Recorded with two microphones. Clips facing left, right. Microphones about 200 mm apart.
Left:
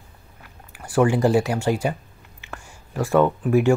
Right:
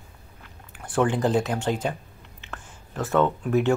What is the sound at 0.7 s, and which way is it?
Speech, 10° left (ahead or behind).